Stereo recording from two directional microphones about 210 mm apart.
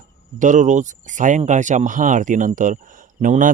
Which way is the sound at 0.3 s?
35° right (ahead or behind).